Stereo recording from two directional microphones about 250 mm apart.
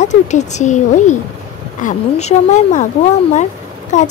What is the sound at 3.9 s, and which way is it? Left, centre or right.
Speech, left.